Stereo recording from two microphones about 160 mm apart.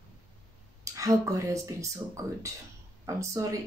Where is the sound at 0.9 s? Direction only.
20° right (ahead or behind).